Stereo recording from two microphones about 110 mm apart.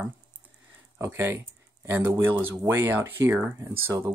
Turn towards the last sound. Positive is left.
turn(degrees=-20)  # may be behind; listen again after turning